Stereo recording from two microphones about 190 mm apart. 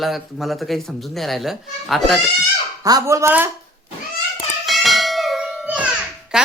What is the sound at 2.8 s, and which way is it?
Speech, 15° right (ahead or behind).